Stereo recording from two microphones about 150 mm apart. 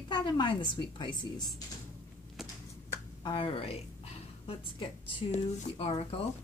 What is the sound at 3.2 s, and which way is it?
A woman's voice, 35° left (ahead or behind).